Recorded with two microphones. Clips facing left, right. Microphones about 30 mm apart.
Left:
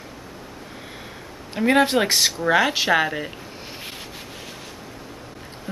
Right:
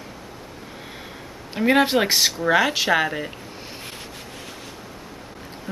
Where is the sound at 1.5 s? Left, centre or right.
Centre.